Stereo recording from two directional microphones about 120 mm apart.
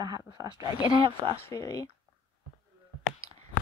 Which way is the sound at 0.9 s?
45° right (ahead or behind).